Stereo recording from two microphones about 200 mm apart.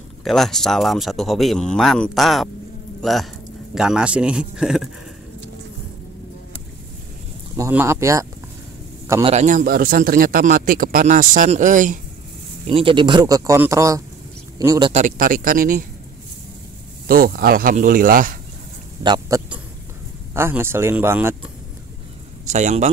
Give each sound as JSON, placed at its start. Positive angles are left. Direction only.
{"t": 0.2, "sound": "speech", "side_deg": 0}
{"t": 7.5, "sound": "speech", "side_deg": -15}
{"t": 9.2, "sound": "a man's voice", "side_deg": -35}
{"t": 12.6, "sound": "speech", "side_deg": -25}
{"t": 14.9, "sound": "speech", "side_deg": -35}
{"t": 17.1, "sound": "speech", "side_deg": -45}
{"t": 19.0, "sound": "speech", "side_deg": -20}
{"t": 22.5, "sound": "a man's voice", "side_deg": -35}